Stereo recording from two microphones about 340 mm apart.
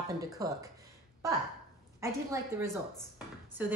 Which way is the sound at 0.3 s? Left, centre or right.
Centre.